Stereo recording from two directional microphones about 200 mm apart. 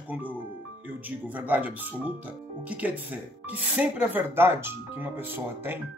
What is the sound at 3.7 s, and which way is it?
Speech, 10° right (ahead or behind).